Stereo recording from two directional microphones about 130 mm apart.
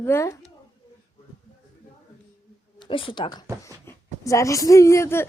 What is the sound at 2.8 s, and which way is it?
Speech, 40° left (ahead or behind).